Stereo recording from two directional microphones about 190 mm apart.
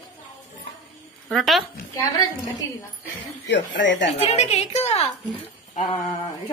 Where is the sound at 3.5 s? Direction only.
70° left (ahead or behind).